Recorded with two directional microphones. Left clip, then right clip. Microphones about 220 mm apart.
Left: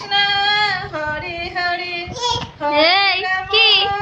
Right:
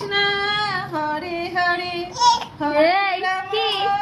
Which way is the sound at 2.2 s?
10° left (ahead or behind).